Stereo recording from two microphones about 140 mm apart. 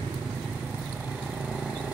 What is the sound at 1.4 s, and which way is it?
Vehicle, 5° right (ahead or behind).